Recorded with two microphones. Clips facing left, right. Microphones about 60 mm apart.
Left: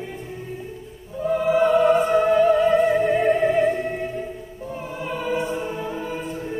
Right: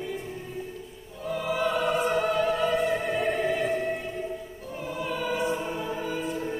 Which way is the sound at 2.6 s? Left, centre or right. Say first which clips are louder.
Left 8 dB; left.